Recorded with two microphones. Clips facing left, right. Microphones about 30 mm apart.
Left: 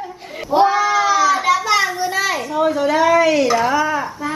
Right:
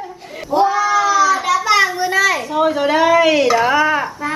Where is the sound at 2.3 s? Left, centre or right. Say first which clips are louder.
Right 2 dB; centre.